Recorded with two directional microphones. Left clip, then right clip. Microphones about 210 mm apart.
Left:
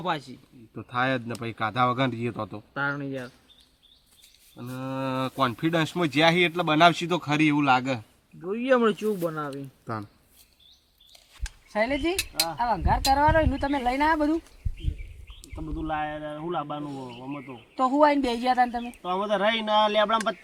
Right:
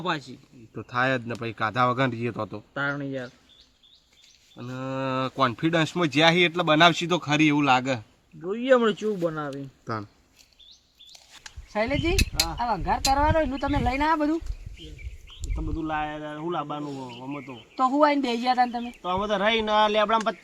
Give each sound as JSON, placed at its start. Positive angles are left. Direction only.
{"t": 0.0, "sound": "speech", "side_deg": 5}
{"t": 0.7, "sound": "speech", "side_deg": -10}
{"t": 2.7, "sound": "speech", "side_deg": 10}
{"t": 4.5, "sound": "speech", "side_deg": -10}
{"t": 8.4, "sound": "speech", "side_deg": 10}
{"t": 9.8, "sound": "speech", "side_deg": -10}
{"t": 11.7, "sound": "speech", "side_deg": 15}
{"t": 12.1, "sound": "speech", "side_deg": -10}
{"t": 12.5, "sound": "speech", "side_deg": 15}
{"t": 15.5, "sound": "speech", "side_deg": -15}
{"t": 17.7, "sound": "speech", "side_deg": 20}
{"t": 19.0, "sound": "speech", "side_deg": -15}